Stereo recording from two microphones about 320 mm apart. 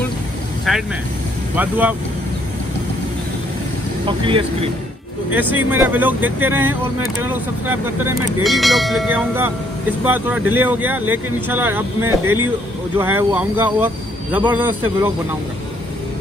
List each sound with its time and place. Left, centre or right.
0.7 s speech: centre
4.0 s speech: centre
5.3 s speech: centre
12.1 s speech: right
12.9 s speech: centre